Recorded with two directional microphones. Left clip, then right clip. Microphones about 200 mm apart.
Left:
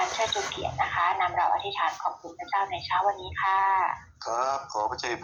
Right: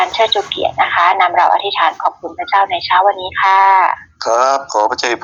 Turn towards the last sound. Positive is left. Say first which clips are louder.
# right 15 dB
turn(degrees=-50)  # may be behind; listen again after turning